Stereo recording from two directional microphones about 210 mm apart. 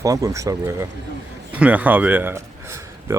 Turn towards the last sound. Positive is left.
turn(degrees=-10)  # may be behind; listen again after turning